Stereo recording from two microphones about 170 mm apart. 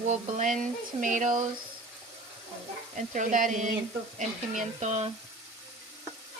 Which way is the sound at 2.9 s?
45° right (ahead or behind).